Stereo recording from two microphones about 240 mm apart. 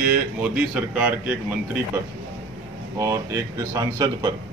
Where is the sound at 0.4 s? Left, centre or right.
Centre.